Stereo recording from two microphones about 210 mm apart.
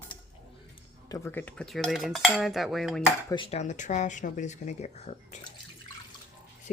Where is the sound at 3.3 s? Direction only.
25° left (ahead or behind).